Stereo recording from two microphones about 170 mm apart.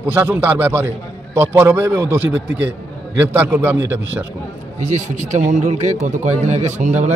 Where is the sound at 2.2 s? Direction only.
90° right.